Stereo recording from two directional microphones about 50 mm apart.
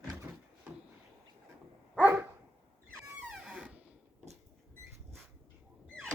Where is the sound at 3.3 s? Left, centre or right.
Centre.